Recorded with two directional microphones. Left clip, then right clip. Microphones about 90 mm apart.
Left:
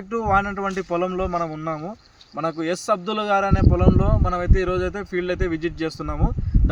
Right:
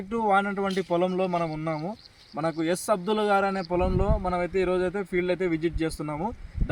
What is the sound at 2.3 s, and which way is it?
A man's voice, 35° left (ahead or behind).